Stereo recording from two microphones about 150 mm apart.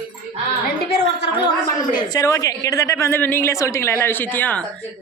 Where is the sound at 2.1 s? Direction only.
25° left (ahead or behind).